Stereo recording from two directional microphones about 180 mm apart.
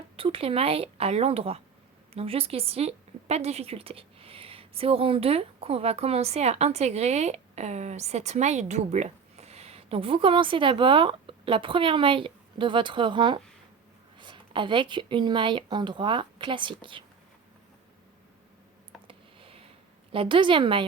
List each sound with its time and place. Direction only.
0.2 s a woman's voice: 30° right (ahead or behind)
19.0 s a sound: 30° right (ahead or behind)
20.1 s speech: 30° right (ahead or behind)